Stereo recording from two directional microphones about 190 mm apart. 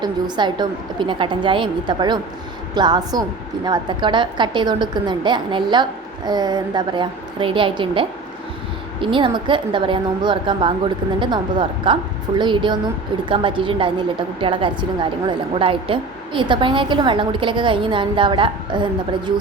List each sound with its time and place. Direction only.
0.0 s a woman's voice: 25° right (ahead or behind)